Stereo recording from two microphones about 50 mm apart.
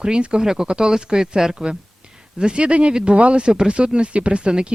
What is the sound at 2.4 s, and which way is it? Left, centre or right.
Speech, right.